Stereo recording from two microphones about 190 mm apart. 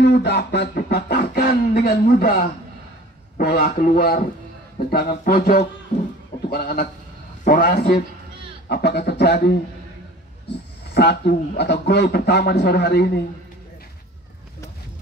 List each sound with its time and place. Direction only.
0.0 s a sound: 65° left (ahead or behind)
3.3 s a man's voice: 50° left (ahead or behind)
11.0 s a man's voice: 60° left (ahead or behind)